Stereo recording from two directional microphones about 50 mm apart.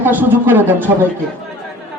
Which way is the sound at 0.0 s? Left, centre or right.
Right.